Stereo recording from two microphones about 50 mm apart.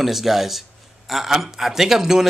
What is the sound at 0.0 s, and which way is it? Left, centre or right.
A man's voice, centre.